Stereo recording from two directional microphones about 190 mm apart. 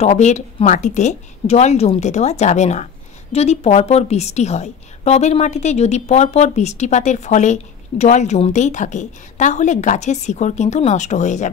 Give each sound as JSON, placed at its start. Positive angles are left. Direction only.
{"t": 0.0, "sound": "a woman's voice", "side_deg": 40}